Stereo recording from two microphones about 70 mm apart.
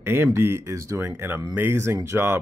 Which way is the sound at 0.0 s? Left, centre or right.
Right.